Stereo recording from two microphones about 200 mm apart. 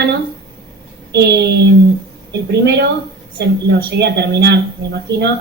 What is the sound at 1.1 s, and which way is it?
Speech, 55° right (ahead or behind).